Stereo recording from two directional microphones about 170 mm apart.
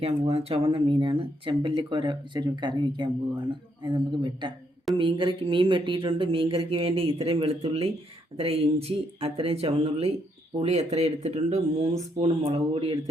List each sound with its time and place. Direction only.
0.0 s speech: 35° right (ahead or behind)